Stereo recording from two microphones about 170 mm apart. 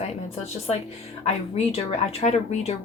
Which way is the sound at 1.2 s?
40° left (ahead or behind).